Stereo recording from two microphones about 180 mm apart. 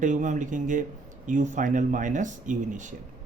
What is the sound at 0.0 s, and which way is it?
Speech, 45° right (ahead or behind).